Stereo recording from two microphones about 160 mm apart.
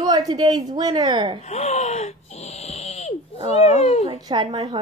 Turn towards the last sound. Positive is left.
turn(degrees=-25)  # may be behind; listen again after turning